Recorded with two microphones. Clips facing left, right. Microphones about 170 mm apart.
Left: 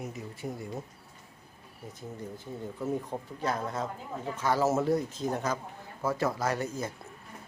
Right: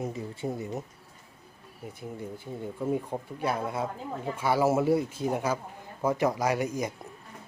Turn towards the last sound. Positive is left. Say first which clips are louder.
# right 4 dB
turn(degrees=-15)  # may be behind; listen again after turning